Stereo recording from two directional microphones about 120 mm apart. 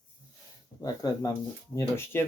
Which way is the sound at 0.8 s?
30° left (ahead or behind).